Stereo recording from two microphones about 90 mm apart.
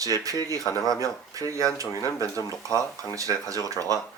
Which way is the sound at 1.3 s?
35° right (ahead or behind).